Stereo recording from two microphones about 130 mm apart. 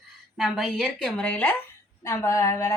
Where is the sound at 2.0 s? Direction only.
25° left (ahead or behind).